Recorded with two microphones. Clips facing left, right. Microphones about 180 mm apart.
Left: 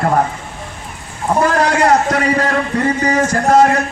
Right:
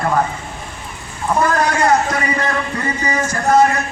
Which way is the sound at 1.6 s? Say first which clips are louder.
Left 3 dB; 70° left (ahead or behind).